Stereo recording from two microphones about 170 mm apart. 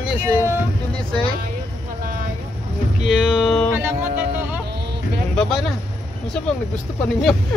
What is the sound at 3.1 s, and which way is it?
Speech, centre (ahead or behind).